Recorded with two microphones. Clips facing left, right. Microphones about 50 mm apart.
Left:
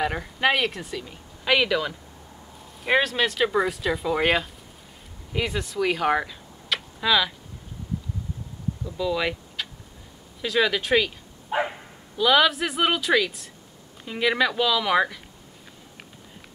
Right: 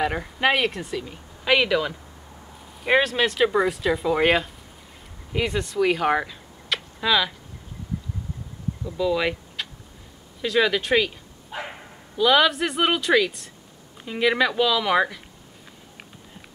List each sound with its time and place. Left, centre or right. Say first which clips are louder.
0.0 s speech: right 1 dB; centre
8.8 s speech: right 3 dB; centre
11.5 s dog: left 8 dB; left
12.2 s speech: right 1 dB; centre